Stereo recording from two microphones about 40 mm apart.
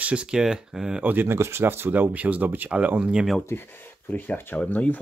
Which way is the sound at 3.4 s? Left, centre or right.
Left.